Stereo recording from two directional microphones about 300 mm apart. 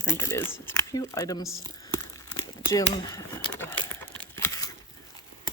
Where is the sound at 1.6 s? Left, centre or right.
Centre.